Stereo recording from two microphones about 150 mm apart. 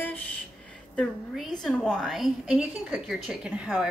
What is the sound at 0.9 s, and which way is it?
A woman's voice, 5° left (ahead or behind).